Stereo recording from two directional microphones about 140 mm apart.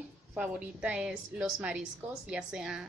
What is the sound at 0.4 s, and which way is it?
A woman's voice, 10° right (ahead or behind).